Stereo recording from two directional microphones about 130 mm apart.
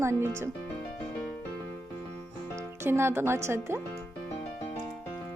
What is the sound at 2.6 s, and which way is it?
Speech, 20° right (ahead or behind).